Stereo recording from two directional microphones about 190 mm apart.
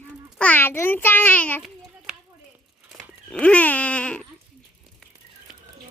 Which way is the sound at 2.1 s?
5° right (ahead or behind).